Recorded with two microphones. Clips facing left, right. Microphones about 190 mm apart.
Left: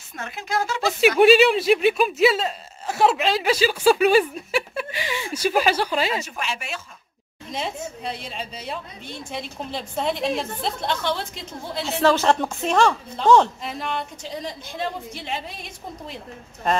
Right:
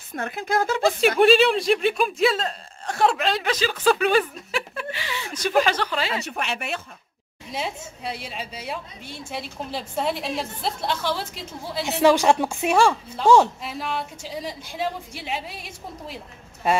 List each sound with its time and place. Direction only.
0.2 s speech: 55° right (ahead or behind)
1.0 s speech: 5° left (ahead or behind)
6.1 s speech: 65° right (ahead or behind)
7.5 s a woman's voice: 5° right (ahead or behind)